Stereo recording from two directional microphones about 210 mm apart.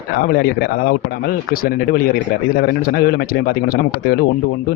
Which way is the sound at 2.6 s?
50° left (ahead or behind).